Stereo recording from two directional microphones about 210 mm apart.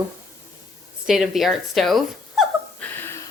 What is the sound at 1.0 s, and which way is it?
Speech, centre (ahead or behind).